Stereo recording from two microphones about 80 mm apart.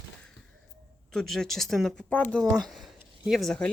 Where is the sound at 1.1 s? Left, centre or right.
Centre.